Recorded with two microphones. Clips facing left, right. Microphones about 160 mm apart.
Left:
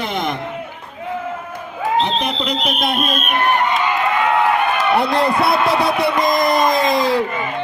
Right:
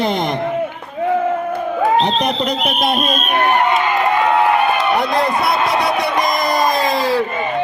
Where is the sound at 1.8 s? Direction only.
35° right (ahead or behind).